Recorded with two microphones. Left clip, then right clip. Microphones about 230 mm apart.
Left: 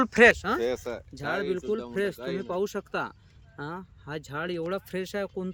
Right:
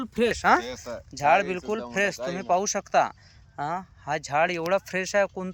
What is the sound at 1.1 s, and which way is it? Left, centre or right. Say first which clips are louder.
Speech: right 9 dB; centre.